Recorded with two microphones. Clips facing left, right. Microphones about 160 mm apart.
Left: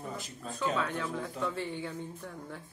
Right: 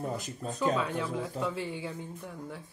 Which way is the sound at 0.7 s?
10° right (ahead or behind).